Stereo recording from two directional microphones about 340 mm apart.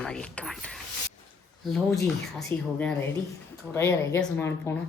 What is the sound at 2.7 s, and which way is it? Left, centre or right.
A woman's voice, centre.